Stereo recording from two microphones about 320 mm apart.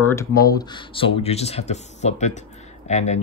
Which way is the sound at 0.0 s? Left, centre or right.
Centre.